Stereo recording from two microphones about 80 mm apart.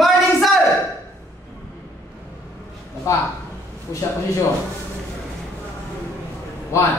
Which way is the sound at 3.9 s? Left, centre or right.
Left.